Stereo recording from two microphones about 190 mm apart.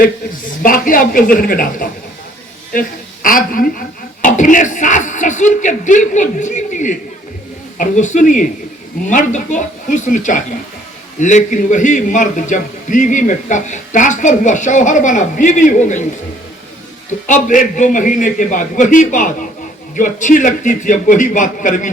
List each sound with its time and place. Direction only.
0.6 s a woman's voice: 50° left (ahead or behind)
3.2 s a man's voice: 45° left (ahead or behind)
17.1 s a man's voice: 40° left (ahead or behind)